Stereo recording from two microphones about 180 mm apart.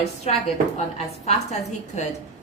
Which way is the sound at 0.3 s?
40° left (ahead or behind).